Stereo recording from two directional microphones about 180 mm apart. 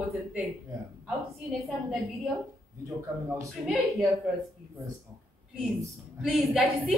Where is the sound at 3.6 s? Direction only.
5° right (ahead or behind).